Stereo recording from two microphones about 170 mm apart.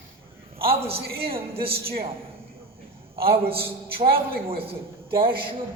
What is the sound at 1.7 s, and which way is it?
Speech, 60° right (ahead or behind).